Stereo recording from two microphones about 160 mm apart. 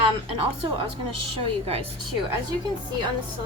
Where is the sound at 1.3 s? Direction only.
40° right (ahead or behind).